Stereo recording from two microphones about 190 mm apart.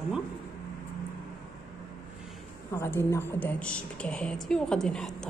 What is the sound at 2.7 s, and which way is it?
A woman's voice, 10° left (ahead or behind).